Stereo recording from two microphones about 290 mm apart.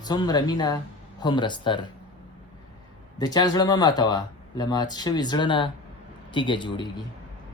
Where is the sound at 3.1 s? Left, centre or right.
Centre.